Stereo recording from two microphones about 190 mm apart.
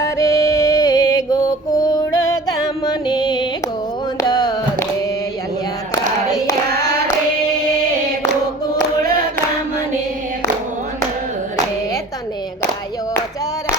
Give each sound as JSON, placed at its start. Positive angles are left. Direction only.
{"t": 0.0, "sound": "music", "side_deg": 15}
{"t": 6.3, "sound": "child singing", "side_deg": 20}